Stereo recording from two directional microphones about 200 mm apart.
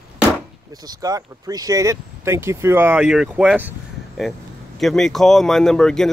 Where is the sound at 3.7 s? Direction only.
Centre (ahead or behind).